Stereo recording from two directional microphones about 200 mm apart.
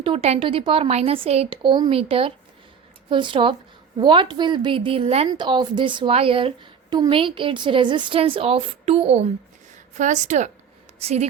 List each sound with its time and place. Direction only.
0.0 s a woman's voice: 30° right (ahead or behind)